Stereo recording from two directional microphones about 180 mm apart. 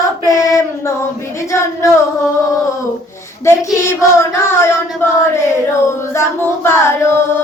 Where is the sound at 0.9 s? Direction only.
15° left (ahead or behind).